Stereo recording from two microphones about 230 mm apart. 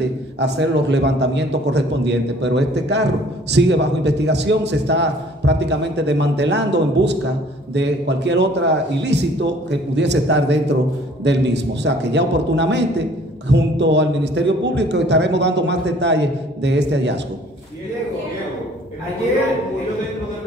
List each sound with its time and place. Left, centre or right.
0.4 s a man's voice: right